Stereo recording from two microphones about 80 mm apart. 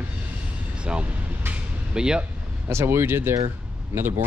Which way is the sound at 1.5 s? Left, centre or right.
Centre.